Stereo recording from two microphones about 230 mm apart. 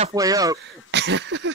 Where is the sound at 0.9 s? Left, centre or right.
Right.